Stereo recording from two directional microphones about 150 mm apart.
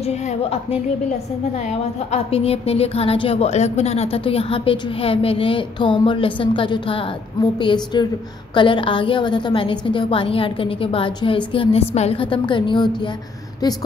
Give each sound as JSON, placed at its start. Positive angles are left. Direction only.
{"t": 0.0, "sound": "a woman's voice", "side_deg": 50}